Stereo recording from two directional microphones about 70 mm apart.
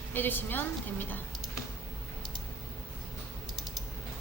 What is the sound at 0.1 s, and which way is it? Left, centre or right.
A woman's voice, left.